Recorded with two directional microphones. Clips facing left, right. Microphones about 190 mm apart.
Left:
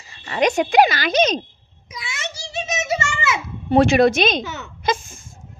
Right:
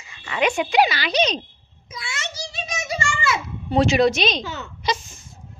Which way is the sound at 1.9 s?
20° left (ahead or behind).